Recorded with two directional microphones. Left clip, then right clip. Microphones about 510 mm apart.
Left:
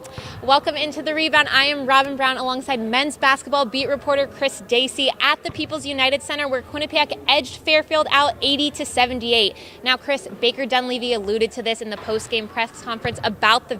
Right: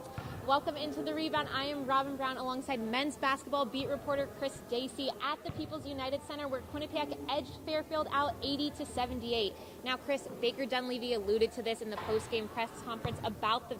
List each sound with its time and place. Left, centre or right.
0.4 s a woman's voice: left